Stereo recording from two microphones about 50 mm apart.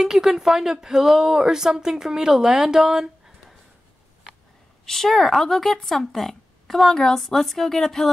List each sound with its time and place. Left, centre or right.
0.0 s speech: centre
4.8 s speech: centre